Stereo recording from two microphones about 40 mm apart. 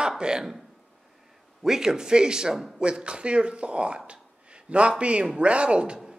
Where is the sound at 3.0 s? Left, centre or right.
Right.